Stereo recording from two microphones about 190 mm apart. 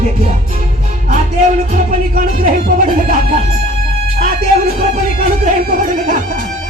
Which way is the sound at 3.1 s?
35° right (ahead or behind).